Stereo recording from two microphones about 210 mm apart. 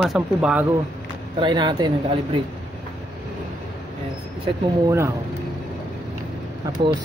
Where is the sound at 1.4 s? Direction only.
20° right (ahead or behind).